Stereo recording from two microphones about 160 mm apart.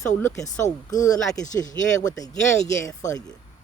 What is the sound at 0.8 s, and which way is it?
Speech, 20° left (ahead or behind).